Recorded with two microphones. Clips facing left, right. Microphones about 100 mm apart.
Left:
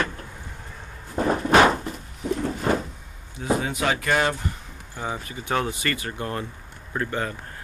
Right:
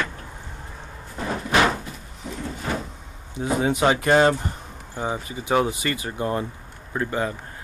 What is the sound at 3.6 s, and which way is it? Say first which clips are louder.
Speech: right 5 dB; 25° right (ahead or behind).